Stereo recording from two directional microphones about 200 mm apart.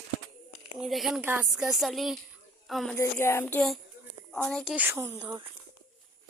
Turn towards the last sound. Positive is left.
turn(degrees=-15)  # may be behind; listen again after turning